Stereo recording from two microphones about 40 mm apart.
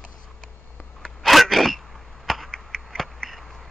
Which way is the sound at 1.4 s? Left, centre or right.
Centre.